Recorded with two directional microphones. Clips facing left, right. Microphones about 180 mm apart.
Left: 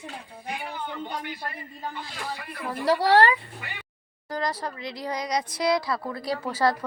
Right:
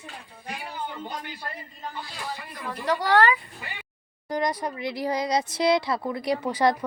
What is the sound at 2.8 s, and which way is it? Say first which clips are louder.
Speech: left 2 dB; 35° left (ahead or behind).